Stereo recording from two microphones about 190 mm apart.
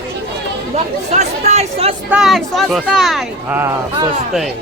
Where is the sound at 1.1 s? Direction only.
35° right (ahead or behind).